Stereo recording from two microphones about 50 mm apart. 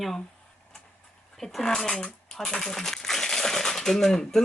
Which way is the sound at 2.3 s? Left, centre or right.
Centre.